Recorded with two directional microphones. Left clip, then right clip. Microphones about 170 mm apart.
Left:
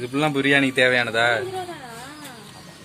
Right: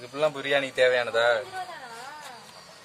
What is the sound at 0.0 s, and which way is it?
Speech, centre (ahead or behind).